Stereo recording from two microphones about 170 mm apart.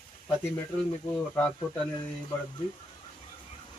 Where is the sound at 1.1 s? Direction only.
10° left (ahead or behind).